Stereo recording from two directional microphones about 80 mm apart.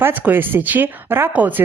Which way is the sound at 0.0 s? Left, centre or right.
Right.